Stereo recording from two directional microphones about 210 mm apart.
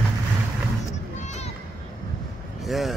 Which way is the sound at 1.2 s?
35° left (ahead or behind).